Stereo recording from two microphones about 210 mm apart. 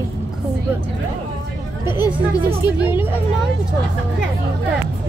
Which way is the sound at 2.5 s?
10° right (ahead or behind).